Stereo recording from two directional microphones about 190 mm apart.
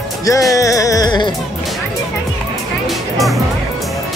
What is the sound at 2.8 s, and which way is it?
Music, centre (ahead or behind).